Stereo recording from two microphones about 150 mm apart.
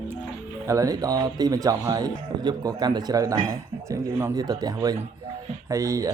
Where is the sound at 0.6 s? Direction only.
20° right (ahead or behind).